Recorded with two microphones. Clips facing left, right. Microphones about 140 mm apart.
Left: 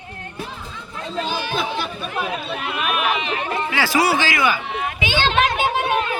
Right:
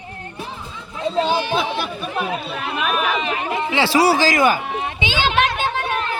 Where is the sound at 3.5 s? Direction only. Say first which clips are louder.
Right 3 dB; 20° right (ahead or behind); by 4.8 s 45° right (ahead or behind).